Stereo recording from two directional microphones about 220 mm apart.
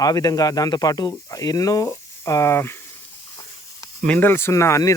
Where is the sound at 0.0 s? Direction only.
15° left (ahead or behind).